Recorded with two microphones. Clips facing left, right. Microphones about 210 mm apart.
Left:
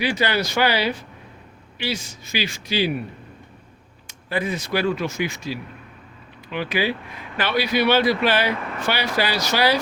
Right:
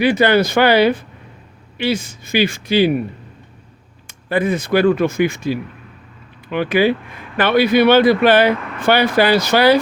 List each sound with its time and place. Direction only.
0.0 s speech: 55° right (ahead or behind)
4.0 s speech: 55° right (ahead or behind)